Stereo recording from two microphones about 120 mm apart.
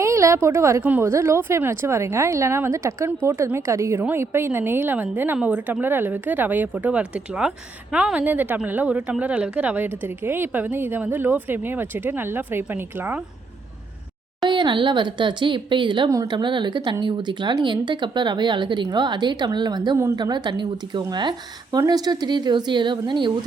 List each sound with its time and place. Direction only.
0.0 s a woman's voice: 25° right (ahead or behind)
14.5 s speech: 40° right (ahead or behind)